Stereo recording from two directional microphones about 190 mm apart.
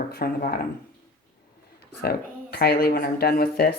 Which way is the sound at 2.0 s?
55° left (ahead or behind).